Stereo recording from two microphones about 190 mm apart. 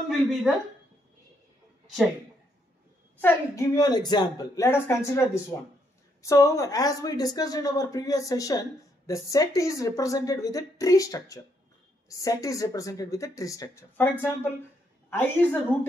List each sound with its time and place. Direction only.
0.1 s speech: centre (ahead or behind)
3.2 s a woman's voice: 10° left (ahead or behind)